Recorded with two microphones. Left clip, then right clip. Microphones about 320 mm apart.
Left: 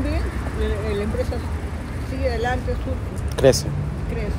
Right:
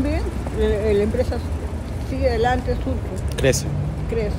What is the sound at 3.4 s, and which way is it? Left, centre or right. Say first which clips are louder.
Speech: left 4 dB; centre.